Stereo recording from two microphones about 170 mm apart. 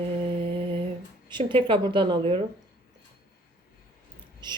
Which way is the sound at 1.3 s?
30° right (ahead or behind).